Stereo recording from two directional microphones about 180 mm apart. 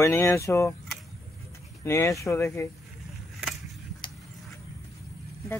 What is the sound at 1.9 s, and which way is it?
Speech, 15° left (ahead or behind).